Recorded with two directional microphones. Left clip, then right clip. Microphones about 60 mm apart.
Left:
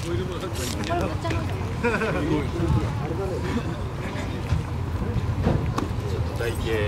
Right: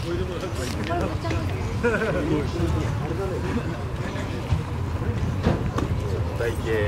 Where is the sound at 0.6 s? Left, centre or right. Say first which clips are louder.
Left 1 dB; left.